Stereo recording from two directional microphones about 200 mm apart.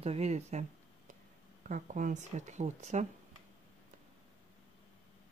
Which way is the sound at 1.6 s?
40° right (ahead or behind).